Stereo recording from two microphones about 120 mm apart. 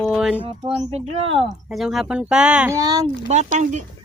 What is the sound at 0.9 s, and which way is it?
Speech, 55° right (ahead or behind).